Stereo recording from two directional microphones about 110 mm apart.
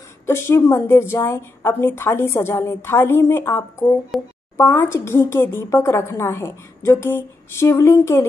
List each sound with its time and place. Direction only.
0.3 s a woman's voice: 20° left (ahead or behind)
4.1 s a child's voice: centre (ahead or behind)
4.6 s a woman's voice: 25° left (ahead or behind)